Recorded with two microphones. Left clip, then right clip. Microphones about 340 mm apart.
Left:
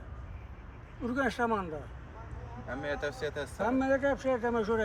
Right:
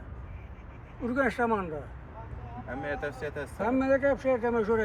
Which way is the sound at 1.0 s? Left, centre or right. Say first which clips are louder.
Right 3 dB; centre.